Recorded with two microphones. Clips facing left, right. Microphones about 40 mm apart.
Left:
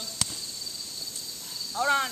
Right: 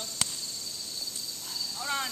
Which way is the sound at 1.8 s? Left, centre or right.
Centre.